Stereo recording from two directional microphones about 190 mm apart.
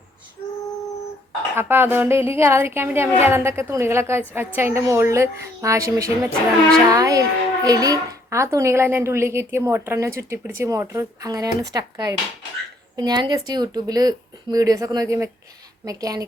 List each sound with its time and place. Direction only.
1.5 s a child's voice: 10° right (ahead or behind)